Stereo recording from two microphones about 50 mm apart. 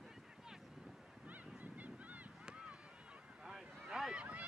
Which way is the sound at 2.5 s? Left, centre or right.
Right.